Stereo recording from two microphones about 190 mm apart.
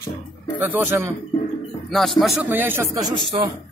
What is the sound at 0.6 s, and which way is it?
Speech, 10° right (ahead or behind).